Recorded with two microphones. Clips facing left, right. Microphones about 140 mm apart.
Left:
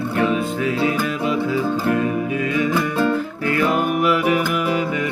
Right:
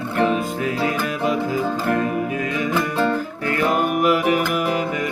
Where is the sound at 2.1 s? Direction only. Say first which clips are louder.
Left 2 dB; 45° right (ahead or behind).